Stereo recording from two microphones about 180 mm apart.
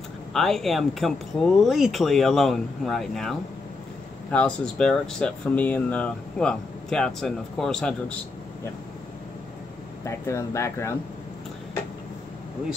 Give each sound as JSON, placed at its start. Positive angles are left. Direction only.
{"t": 0.3, "sound": "speech", "side_deg": 0}
{"t": 10.0, "sound": "speech", "side_deg": 15}